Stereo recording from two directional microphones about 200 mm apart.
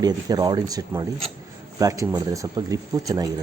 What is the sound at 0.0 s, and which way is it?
Speech, 20° right (ahead or behind).